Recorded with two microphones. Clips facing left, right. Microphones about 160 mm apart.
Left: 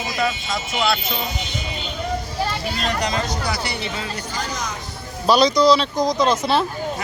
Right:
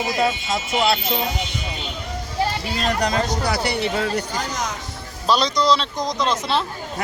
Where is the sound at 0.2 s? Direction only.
30° right (ahead or behind).